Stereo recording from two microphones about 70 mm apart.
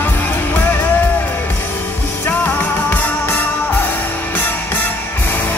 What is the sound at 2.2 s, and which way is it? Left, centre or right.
Music, left.